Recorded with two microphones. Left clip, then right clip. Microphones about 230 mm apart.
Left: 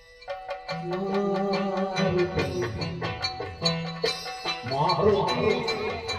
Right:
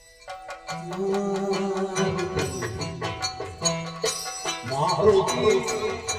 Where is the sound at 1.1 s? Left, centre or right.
Centre.